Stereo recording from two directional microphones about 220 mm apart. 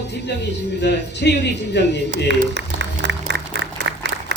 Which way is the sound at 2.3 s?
50° right (ahead or behind).